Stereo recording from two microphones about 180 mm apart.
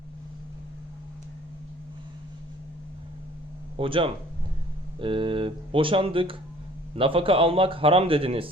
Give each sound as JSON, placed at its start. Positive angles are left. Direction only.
{"t": 3.8, "sound": "speech", "side_deg": -30}